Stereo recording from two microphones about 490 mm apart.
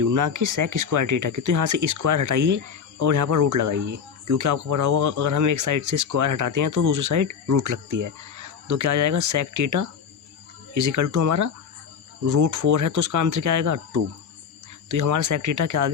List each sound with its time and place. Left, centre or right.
0.0 s speech: right